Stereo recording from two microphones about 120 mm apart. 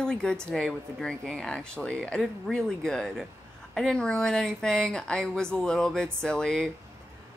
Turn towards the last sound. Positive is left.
turn(degrees=5)  # may be behind; listen again after turning